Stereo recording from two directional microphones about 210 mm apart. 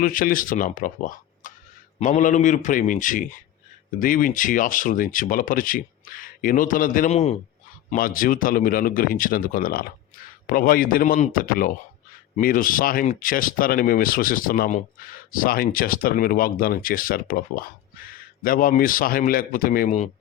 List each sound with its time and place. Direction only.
0.0 s speech: 40° left (ahead or behind)
7.9 s speech: 40° left (ahead or behind)